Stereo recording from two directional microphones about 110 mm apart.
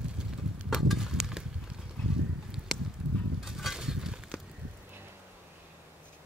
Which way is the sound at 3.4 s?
5° right (ahead or behind).